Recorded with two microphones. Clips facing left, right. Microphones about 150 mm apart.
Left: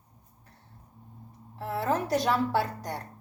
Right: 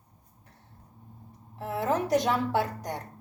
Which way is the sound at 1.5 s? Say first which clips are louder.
Right 1 dB; 15° right (ahead or behind).